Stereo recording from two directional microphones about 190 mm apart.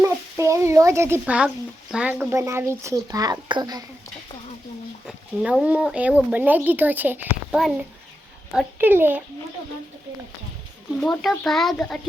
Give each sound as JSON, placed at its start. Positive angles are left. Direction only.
{"t": 0.0, "sound": "speech", "side_deg": -15}
{"t": 5.0, "sound": "speech", "side_deg": -5}
{"t": 11.0, "sound": "a child's voice", "side_deg": 0}